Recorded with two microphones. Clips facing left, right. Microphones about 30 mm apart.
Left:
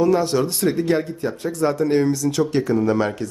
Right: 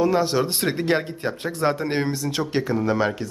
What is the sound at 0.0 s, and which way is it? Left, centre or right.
Speech, centre.